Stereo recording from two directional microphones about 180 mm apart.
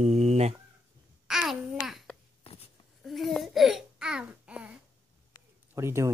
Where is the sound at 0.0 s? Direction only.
35° right (ahead or behind).